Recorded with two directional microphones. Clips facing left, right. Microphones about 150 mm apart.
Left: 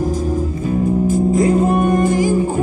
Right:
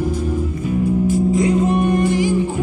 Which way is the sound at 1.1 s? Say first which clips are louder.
Left 3 dB; 45° left (ahead or behind).